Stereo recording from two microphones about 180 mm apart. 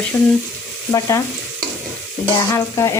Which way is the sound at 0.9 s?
15° left (ahead or behind).